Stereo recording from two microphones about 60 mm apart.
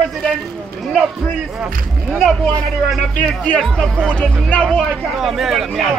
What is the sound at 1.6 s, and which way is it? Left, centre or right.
Speech, centre.